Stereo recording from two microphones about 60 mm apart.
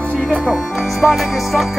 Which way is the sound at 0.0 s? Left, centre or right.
Right.